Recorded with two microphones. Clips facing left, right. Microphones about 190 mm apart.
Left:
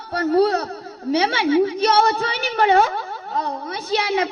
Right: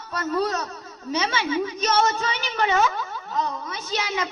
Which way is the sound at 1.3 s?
60° left (ahead or behind).